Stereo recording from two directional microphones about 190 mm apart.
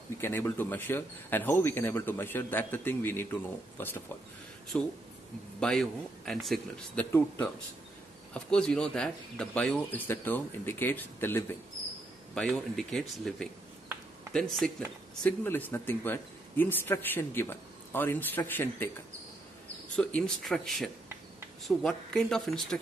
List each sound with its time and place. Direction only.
0.2 s speech: 10° left (ahead or behind)
20.0 s speech: 5° left (ahead or behind)